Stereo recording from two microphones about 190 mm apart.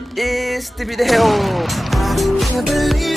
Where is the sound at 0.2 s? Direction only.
Centre (ahead or behind).